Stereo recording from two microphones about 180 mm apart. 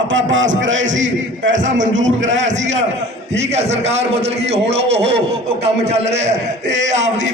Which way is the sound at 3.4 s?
40° right (ahead or behind).